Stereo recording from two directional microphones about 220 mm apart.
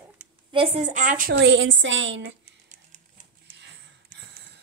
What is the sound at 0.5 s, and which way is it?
Speech, 25° right (ahead or behind).